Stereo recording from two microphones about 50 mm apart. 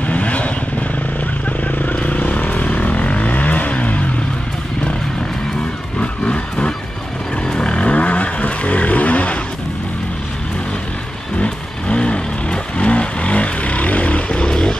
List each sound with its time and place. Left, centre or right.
0.0 s vehicle: left
1.6 s vehicle: left
5.9 s vehicle: left
11.3 s vehicle: left